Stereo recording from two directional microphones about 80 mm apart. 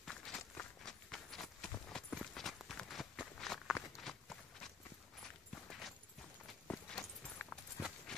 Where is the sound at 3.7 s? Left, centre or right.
Centre.